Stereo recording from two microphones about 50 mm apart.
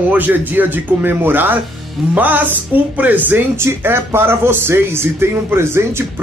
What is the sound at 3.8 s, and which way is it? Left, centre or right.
Speech, right.